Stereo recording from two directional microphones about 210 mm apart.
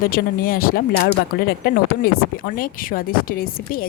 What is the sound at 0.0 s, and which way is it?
Speech, 45° left (ahead or behind).